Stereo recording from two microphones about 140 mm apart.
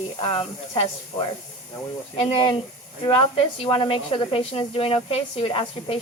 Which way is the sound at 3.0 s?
40° left (ahead or behind).